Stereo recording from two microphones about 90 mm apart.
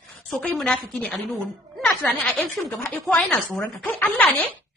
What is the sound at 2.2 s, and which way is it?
Speech, 15° left (ahead or behind).